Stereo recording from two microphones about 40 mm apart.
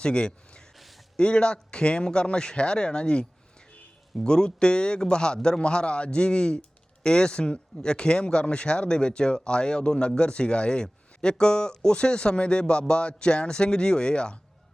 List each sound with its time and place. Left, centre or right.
0.0 s speech: left